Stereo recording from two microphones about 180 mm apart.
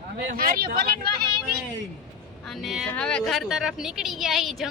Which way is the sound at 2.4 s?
Centre (ahead or behind).